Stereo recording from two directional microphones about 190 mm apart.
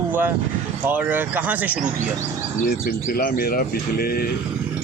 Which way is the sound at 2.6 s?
50° left (ahead or behind).